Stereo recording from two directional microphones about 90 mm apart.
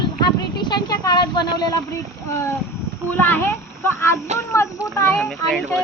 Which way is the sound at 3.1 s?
20° left (ahead or behind).